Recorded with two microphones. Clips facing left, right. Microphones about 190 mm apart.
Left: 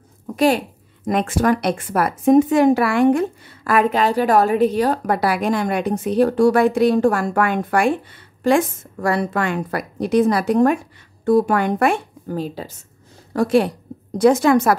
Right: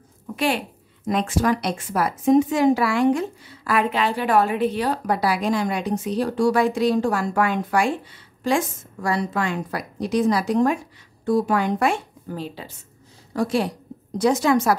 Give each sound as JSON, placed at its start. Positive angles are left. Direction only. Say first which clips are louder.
{"t": 1.0, "sound": "a woman's voice", "louder": "left 3 dB", "side_deg": 55}
{"t": 13.3, "sound": "a woman's voice", "louder": "left 6 dB", "side_deg": 55}